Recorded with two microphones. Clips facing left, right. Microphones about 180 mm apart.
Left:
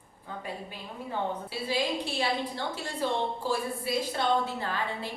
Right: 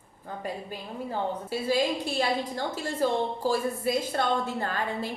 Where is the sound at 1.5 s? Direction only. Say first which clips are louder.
Right 6 dB; 45° right (ahead or behind).